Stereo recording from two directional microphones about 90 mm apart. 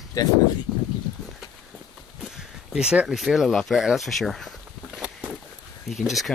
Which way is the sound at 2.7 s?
10° right (ahead or behind).